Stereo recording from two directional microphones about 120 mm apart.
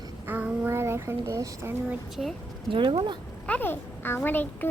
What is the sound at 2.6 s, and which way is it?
Speech, 45° right (ahead or behind).